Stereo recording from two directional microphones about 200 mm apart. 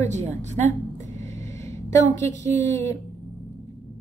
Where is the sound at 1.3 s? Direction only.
15° left (ahead or behind).